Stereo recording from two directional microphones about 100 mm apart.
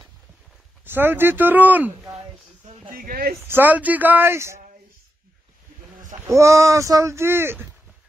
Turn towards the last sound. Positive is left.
turn(degrees=-25)  # may be behind; listen again after turning